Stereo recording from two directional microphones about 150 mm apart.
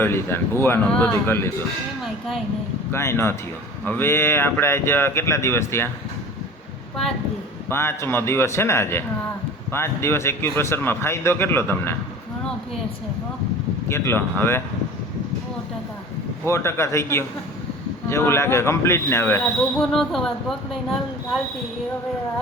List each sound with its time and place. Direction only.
0.0 s a man's voice: 15° left (ahead or behind)
2.9 s a man's voice: 15° left (ahead or behind)
7.7 s a man's voice: 15° left (ahead or behind)
13.8 s a man's voice: 15° left (ahead or behind)
16.5 s a man's voice: 20° left (ahead or behind)
19.8 s speech: centre (ahead or behind)